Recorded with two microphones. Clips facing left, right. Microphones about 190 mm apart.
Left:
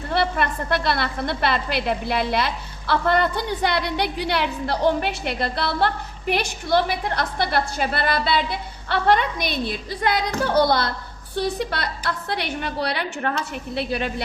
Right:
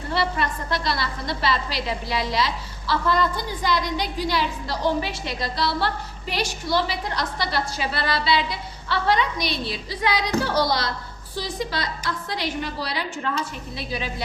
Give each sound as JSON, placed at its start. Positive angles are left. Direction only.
{"t": 0.1, "sound": "a woman's voice", "side_deg": 55}